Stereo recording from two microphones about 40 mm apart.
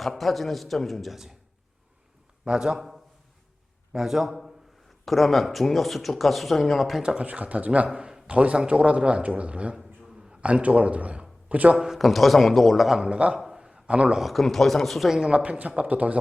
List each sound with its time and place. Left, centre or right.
0.0 s speech: centre
2.4 s a man's voice: centre
2.7 s a man's voice: centre
7.0 s a man's voice: right
7.3 s a man's voice: right
7.9 s a man's voice: right
11.8 s speech: centre
13.1 s a man's voice: right
13.4 s a sound: centre
13.8 s a man's voice: right
14.2 s speech: centre
15.1 s a man's voice: centre
15.4 s a man's voice: right